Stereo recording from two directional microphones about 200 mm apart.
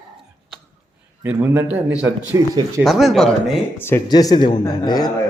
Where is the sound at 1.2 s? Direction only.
10° right (ahead or behind).